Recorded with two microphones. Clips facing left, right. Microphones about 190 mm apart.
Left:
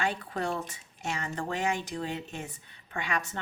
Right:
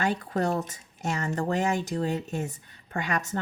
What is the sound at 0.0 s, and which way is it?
Speech, 45° right (ahead or behind).